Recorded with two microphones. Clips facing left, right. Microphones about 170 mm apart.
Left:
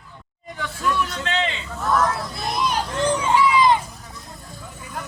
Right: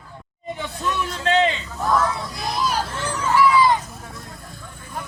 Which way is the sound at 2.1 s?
Centre (ahead or behind).